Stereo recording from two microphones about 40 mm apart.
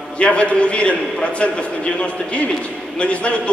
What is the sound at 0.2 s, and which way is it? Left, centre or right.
A man's voice, left.